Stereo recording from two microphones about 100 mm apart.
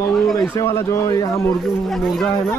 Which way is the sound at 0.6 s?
30° left (ahead or behind).